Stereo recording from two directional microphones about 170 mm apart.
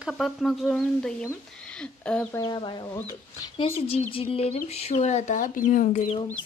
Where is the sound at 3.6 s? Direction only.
35° left (ahead or behind).